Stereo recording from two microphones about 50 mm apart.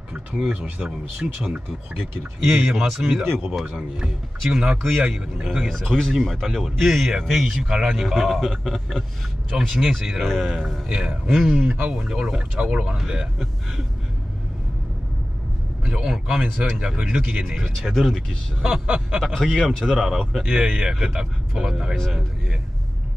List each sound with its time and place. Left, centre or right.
0.1 s speech: centre
0.8 s speech: centre
5.7 s speech: centre
6.4 s speech: centre
9.5 s speech: centre
10.9 s speech: centre
11.3 s speech: centre
11.8 s speech: centre
15.8 s a man's voice: centre
17.6 s speech: centre
18.9 s snicker: centre
19.1 s speech: centre